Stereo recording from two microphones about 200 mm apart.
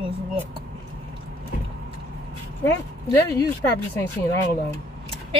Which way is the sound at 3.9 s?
10° left (ahead or behind).